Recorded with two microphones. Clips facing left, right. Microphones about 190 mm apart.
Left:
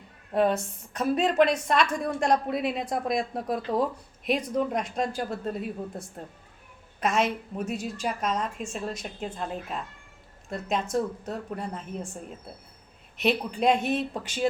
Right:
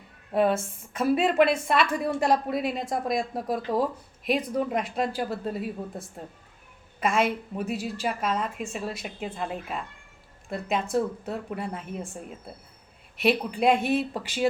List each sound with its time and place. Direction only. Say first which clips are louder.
0.3 s speech: right 1 dB; 5° right (ahead or behind)
7.0 s speech: right 1 dB; 5° right (ahead or behind)